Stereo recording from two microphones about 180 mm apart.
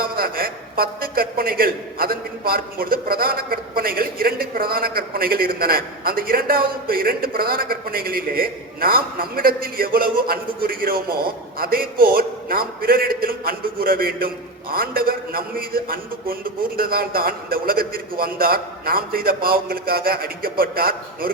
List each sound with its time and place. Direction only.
0.0 s a man's voice: 55° right (ahead or behind)